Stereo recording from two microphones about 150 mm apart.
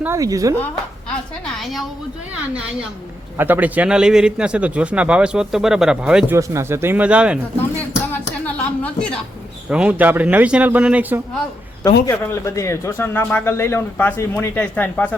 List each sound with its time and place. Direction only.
0.0 s speech: 20° right (ahead or behind)
3.3 s a man's voice: 15° right (ahead or behind)
6.3 s a man's voice: 20° right (ahead or behind)
7.8 s music: 10° left (ahead or behind)
9.6 s a man's voice: 5° right (ahead or behind)
12.2 s a man's voice: 15° left (ahead or behind)